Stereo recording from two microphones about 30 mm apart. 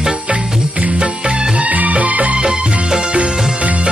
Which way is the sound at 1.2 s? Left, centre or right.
Right.